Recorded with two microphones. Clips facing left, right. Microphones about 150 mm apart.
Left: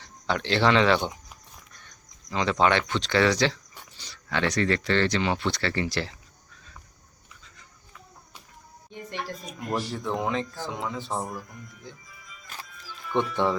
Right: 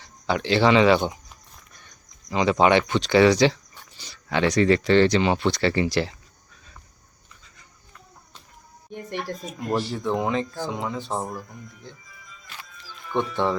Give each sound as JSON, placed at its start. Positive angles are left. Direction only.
{"t": 0.0, "sound": "speech", "side_deg": -5}
{"t": 2.3, "sound": "speech", "side_deg": -10}
{"t": 9.7, "sound": "speech", "side_deg": 0}
{"t": 12.5, "sound": "music", "side_deg": 45}
{"t": 13.1, "sound": "speech", "side_deg": -15}